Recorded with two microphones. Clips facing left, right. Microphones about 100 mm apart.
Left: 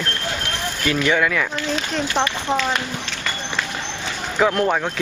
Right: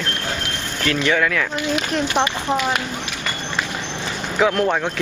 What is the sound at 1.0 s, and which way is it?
Speech, 5° left (ahead or behind).